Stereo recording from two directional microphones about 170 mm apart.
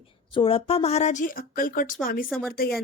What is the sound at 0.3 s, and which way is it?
Speech, 30° left (ahead or behind).